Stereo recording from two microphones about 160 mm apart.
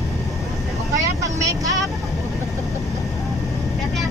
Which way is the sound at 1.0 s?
20° right (ahead or behind).